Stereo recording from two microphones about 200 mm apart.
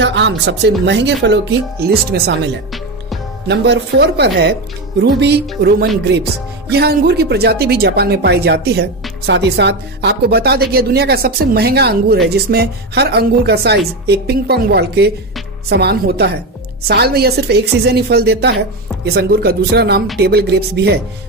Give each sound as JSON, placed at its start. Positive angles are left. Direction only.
{"t": 0.0, "sound": "speech", "side_deg": -60}